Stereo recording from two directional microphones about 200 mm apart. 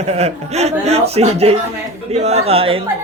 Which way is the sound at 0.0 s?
30° right (ahead or behind).